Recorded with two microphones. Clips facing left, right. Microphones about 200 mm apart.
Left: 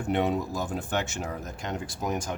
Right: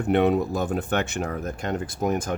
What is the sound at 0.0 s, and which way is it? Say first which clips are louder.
Speech: right 6 dB; 60° right (ahead or behind).